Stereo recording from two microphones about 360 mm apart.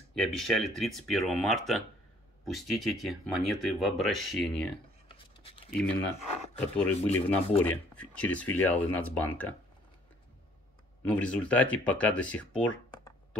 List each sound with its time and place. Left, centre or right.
0.1 s speech: centre
5.0 s writing: centre
5.8 s speech: centre
6.9 s speech: centre
7.9 s speech: centre
11.1 s speech: centre